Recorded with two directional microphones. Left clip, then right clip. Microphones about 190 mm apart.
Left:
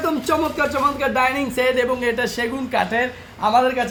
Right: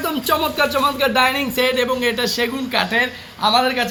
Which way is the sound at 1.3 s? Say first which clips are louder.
Right 1 dB; 25° left (ahead or behind).